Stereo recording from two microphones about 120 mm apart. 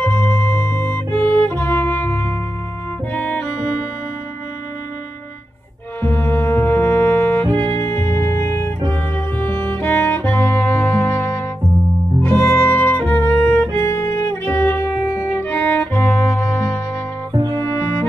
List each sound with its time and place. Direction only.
0.0 s music: 15° left (ahead or behind)
5.9 s music: 20° left (ahead or behind)
7.4 s music: 40° right (ahead or behind)
7.8 s music: 20° left (ahead or behind)
17.3 s music: 35° right (ahead or behind)